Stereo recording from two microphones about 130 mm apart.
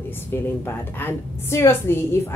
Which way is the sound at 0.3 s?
15° left (ahead or behind).